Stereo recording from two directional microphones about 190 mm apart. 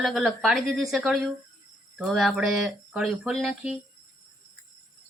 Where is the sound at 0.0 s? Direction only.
Centre (ahead or behind).